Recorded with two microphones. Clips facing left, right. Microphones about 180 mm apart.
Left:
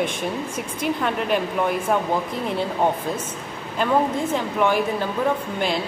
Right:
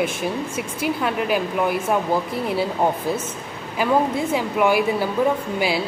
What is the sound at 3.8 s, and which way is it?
Speech, 10° right (ahead or behind).